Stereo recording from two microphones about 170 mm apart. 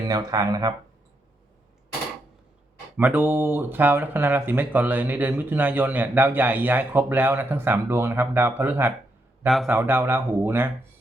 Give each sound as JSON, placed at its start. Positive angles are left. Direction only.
{"t": 0.1, "sound": "speech", "side_deg": -20}
{"t": 3.0, "sound": "speech", "side_deg": -10}